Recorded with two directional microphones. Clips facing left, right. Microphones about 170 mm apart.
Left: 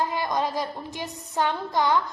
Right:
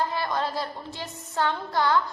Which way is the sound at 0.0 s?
15° left (ahead or behind).